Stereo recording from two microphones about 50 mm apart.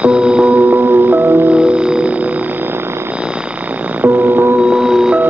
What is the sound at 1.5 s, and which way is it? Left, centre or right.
Music, right.